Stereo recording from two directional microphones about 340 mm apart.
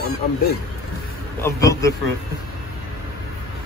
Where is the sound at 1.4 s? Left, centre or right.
Centre.